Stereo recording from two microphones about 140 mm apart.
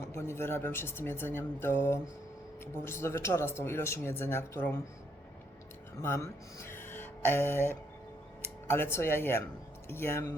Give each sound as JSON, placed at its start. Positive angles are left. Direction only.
{"t": 0.1, "sound": "speech", "side_deg": 20}
{"t": 6.0, "sound": "speech", "side_deg": 20}